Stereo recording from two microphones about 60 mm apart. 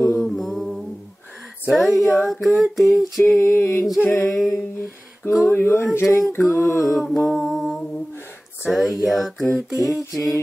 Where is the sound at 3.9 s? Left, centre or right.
Left.